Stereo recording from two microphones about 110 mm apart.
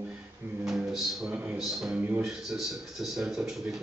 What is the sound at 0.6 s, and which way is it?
Speech, 5° right (ahead or behind).